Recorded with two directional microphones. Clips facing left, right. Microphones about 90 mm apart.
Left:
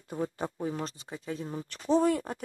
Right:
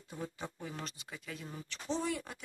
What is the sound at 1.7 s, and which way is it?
Speech, 50° left (ahead or behind).